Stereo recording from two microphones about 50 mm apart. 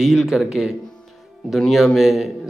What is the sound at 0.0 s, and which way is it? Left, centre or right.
Speech, centre.